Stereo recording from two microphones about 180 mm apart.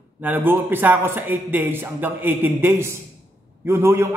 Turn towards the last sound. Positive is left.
turn(degrees=-15)  # may be behind; listen again after turning